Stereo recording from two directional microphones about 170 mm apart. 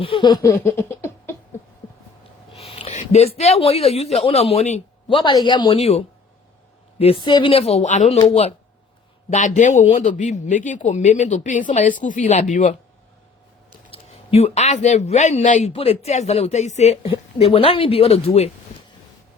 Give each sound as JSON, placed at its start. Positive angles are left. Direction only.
{"t": 0.0, "sound": "laughter", "side_deg": 30}
{"t": 2.5, "sound": "a man's voice", "side_deg": 35}
{"t": 13.9, "sound": "speech", "side_deg": 35}